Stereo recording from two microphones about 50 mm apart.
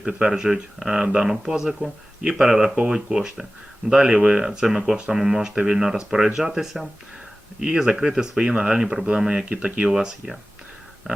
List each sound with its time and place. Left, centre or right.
0.0 s speech: centre
9.9 s speech: centre